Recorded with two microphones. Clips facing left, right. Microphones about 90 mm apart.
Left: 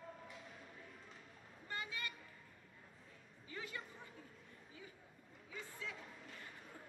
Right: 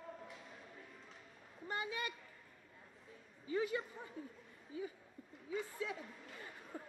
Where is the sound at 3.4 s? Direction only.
20° right (ahead or behind).